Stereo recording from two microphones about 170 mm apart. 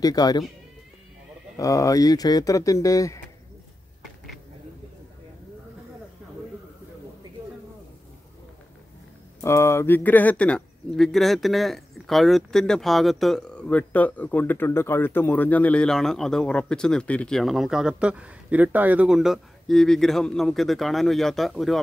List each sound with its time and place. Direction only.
0.0 s speech: 20° left (ahead or behind)
1.6 s speech: 20° left (ahead or behind)
9.4 s speech: 15° left (ahead or behind); by 21.7 s centre (ahead or behind)